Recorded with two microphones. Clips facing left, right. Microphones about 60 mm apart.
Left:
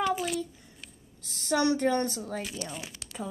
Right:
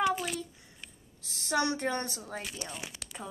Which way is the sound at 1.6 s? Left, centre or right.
Right.